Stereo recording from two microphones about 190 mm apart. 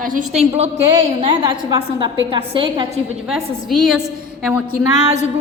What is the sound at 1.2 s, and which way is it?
A woman's voice, 25° right (ahead or behind).